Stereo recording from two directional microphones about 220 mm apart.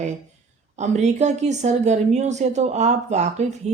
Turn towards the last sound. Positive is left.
turn(degrees=-30)  # may be behind; listen again after turning